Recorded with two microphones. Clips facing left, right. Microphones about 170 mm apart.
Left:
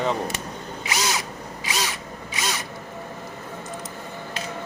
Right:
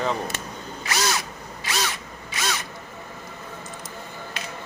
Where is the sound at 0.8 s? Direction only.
15° left (ahead or behind).